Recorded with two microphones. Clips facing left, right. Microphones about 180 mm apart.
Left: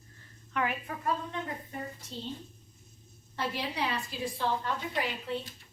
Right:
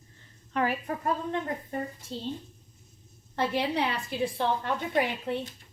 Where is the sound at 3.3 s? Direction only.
60° right (ahead or behind).